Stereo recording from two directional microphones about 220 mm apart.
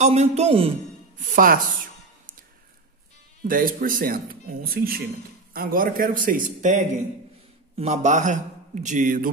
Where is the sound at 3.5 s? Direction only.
40° right (ahead or behind).